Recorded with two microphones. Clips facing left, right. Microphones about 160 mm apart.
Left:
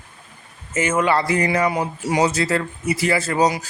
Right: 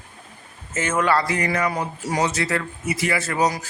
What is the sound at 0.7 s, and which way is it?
Speech, 10° left (ahead or behind).